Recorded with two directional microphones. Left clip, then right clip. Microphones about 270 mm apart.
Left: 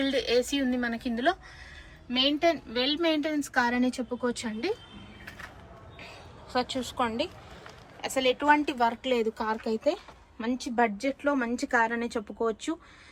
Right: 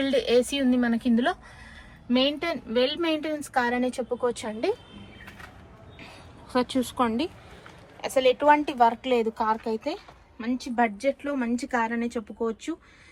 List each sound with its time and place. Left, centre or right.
0.1 s a woman's voice: centre
2.8 s a woman's voice: centre
6.5 s a woman's voice: centre; by 12.7 s left